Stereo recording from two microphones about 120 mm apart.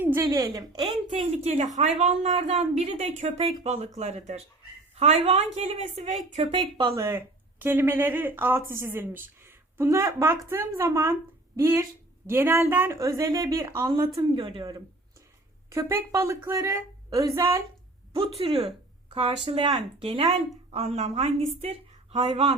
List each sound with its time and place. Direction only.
0.0 s a sound: 20° right (ahead or behind)
0.3 s a woman's voice: 30° right (ahead or behind)
0.9 s speech: 55° right (ahead or behind)
6.5 s speech: 40° right (ahead or behind)
6.9 s speech: 20° right (ahead or behind)
14.2 s a woman's voice: 45° right (ahead or behind)
15.7 s speech: 25° right (ahead or behind)
18.2 s speech: 50° right (ahead or behind)
20.7 s a woman's voice: 65° right (ahead or behind)